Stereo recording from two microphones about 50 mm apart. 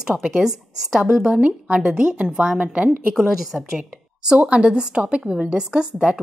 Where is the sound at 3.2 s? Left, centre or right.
Centre.